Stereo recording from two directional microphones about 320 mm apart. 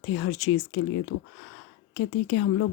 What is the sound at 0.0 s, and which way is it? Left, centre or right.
Speech, left.